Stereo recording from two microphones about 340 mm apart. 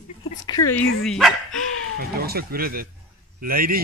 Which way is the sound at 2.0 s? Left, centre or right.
Right.